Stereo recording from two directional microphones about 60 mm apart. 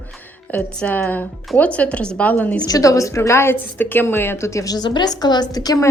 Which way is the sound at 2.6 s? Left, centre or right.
Left.